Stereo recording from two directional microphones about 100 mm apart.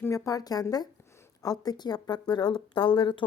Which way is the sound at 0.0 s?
30° left (ahead or behind).